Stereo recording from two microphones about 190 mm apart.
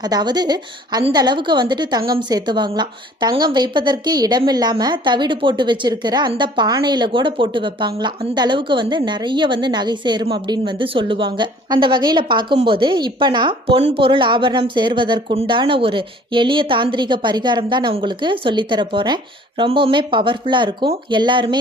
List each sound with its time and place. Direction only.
0.0 s a woman's voice: 20° right (ahead or behind)